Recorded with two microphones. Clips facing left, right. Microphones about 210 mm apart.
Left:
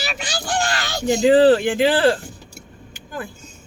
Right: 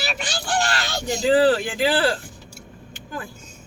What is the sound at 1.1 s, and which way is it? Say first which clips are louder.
Speech: left 5 dB; 20° left (ahead or behind).